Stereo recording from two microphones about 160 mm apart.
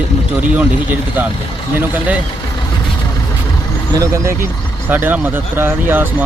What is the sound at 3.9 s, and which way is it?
Speech, 20° right (ahead or behind).